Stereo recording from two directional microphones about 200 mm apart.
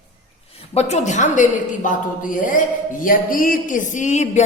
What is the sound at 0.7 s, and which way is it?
A woman's voice, 30° left (ahead or behind).